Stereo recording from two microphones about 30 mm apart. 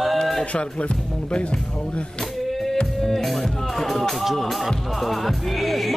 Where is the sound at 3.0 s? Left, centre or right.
Centre.